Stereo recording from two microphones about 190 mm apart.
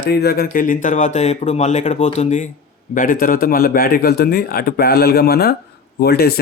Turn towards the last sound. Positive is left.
turn(degrees=55)  # may be behind; listen again after turning